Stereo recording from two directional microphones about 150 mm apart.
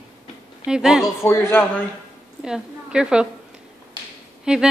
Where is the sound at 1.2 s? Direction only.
15° left (ahead or behind).